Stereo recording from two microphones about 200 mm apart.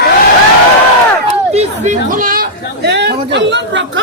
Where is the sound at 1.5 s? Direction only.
35° right (ahead or behind).